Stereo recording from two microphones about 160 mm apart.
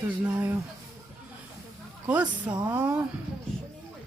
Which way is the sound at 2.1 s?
10° right (ahead or behind).